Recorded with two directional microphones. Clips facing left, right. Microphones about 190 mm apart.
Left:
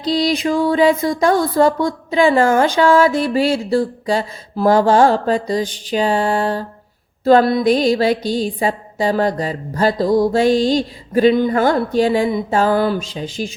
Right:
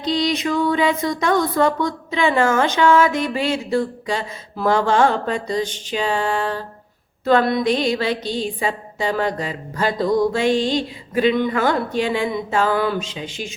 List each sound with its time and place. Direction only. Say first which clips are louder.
0.0 s speech: left 3 dB; 35° left (ahead or behind)